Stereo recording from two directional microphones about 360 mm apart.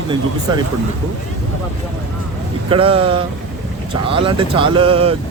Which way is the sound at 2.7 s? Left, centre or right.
Centre.